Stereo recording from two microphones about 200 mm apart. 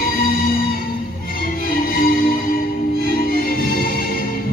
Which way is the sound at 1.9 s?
45° left (ahead or behind).